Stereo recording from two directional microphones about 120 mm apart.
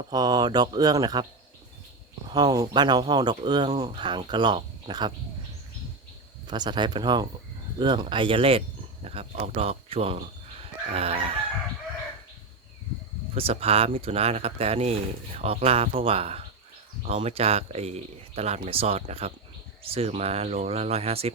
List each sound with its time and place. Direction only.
0.1 s speech: 35° right (ahead or behind)
2.3 s speech: 35° right (ahead or behind)
6.5 s speech: 40° right (ahead or behind); by 11.3 s 55° right (ahead or behind)
13.3 s speech: 55° right (ahead or behind)